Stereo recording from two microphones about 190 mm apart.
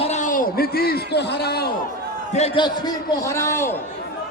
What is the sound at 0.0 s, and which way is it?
A man's voice, 40° left (ahead or behind).